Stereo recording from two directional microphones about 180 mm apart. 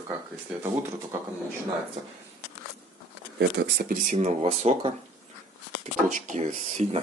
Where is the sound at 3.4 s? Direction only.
65° right (ahead or behind); by 4.9 s 35° right (ahead or behind).